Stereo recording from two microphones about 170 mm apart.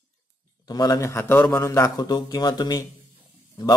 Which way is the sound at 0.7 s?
20° left (ahead or behind).